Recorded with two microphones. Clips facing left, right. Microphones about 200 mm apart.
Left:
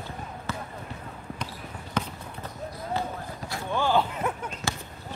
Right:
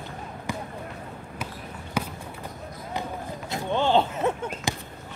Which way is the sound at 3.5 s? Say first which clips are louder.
Right 3 dB; 25° right (ahead or behind).